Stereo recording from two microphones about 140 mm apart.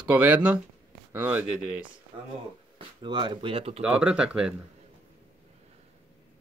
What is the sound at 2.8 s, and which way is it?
Speech, 35° right (ahead or behind).